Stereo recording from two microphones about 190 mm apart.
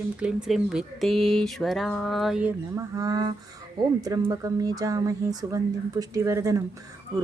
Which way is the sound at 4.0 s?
15° right (ahead or behind).